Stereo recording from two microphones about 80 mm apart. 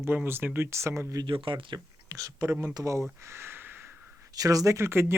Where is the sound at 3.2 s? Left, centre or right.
Right.